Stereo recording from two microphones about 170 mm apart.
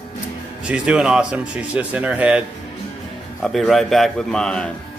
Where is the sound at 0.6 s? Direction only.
5° right (ahead or behind).